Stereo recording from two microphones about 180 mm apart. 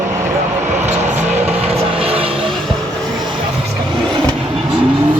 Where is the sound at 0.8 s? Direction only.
40° right (ahead or behind).